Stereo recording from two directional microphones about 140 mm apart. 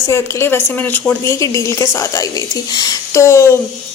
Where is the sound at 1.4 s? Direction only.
25° left (ahead or behind).